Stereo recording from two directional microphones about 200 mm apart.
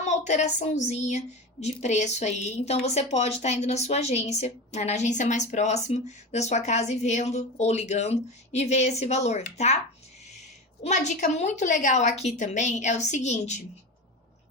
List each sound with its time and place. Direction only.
0.0 s a woman's voice: 35° left (ahead or behind)
10.8 s a woman's voice: 35° left (ahead or behind)